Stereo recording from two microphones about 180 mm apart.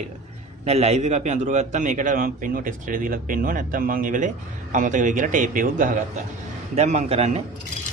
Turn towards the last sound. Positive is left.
turn(degrees=-35)  # may be behind; listen again after turning